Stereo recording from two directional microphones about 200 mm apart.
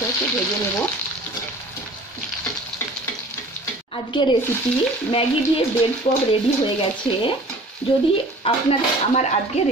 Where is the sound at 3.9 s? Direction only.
25° left (ahead or behind).